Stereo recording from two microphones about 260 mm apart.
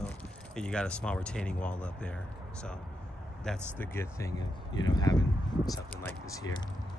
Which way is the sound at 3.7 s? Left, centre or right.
Centre.